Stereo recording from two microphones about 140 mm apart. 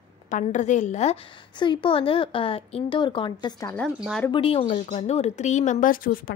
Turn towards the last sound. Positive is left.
turn(degrees=90)